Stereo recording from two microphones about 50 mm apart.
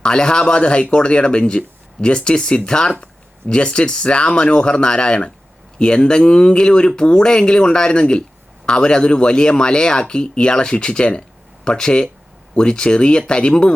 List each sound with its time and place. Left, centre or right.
0.0 s speech: centre